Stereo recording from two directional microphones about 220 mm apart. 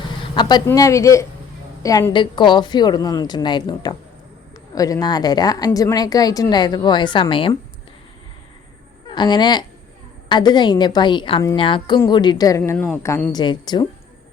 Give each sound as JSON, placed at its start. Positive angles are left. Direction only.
{"t": 0.3, "sound": "a woman's voice", "side_deg": 20}
{"t": 9.0, "sound": "a woman's voice", "side_deg": 20}